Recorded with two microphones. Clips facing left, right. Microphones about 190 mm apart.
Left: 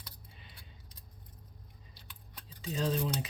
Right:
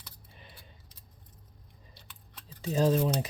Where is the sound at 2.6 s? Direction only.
40° right (ahead or behind).